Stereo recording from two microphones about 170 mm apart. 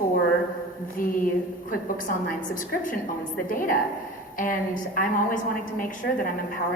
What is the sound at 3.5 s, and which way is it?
A woman's voice, 55° left (ahead or behind).